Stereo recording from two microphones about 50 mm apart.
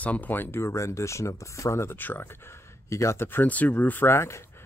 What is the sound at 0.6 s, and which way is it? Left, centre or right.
Speech, left.